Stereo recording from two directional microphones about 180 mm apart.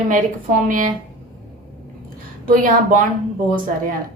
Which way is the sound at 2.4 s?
50° right (ahead or behind).